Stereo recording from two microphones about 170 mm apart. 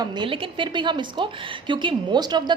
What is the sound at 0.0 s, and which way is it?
A woman's voice, 30° right (ahead or behind).